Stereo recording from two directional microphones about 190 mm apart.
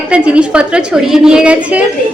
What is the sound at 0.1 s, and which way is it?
A woman's voice, 5° right (ahead or behind).